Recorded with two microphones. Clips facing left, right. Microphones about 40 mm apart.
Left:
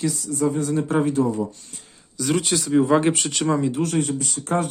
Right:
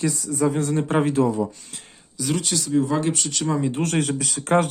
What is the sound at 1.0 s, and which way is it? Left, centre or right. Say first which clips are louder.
Speech: right 1 dB; right.